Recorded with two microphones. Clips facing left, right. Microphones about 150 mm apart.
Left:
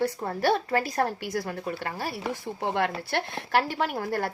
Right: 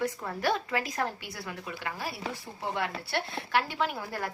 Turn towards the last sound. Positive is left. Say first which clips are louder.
# left 4 dB
turn(degrees=40)  # may be behind; listen again after turning